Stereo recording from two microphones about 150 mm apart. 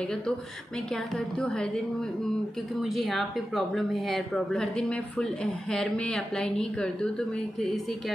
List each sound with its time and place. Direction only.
0.9 s speech: 5° left (ahead or behind)